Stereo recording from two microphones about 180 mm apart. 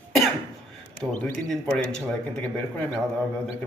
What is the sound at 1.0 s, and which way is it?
Speech, 5° left (ahead or behind).